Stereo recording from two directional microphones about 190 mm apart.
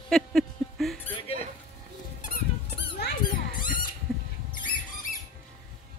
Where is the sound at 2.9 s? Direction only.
55° left (ahead or behind).